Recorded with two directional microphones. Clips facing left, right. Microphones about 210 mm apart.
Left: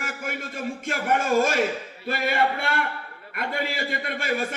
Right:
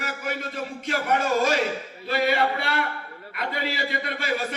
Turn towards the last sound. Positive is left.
turn(degrees=50)  # may be behind; listen again after turning